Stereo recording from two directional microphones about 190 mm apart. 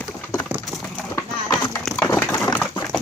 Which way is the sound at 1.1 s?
20° left (ahead or behind).